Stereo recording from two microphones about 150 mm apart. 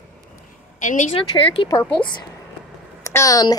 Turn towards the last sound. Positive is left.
turn(degrees=25)  # may be behind; listen again after turning